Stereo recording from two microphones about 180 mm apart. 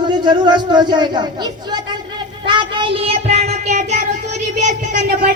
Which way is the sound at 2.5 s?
25° right (ahead or behind).